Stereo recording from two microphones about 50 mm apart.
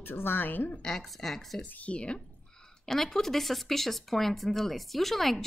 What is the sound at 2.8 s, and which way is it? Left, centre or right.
Speech, centre.